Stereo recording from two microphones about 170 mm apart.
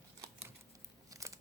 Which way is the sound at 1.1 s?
20° right (ahead or behind).